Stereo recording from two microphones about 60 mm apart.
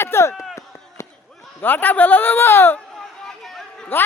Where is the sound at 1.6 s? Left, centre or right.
Left.